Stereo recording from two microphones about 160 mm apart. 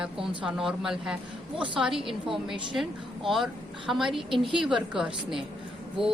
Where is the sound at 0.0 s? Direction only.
5° right (ahead or behind).